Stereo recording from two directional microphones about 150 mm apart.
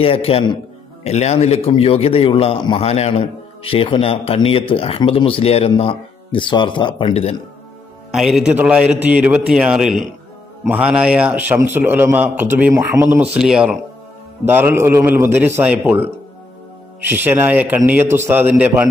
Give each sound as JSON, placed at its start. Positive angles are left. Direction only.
{"t": 0.0, "sound": "a man's voice", "side_deg": 40}
{"t": 8.1, "sound": "a man's voice", "side_deg": 0}
{"t": 13.2, "sound": "speech", "side_deg": -5}
{"t": 14.4, "sound": "a man's voice", "side_deg": -15}
{"t": 17.1, "sound": "a man's voice", "side_deg": -15}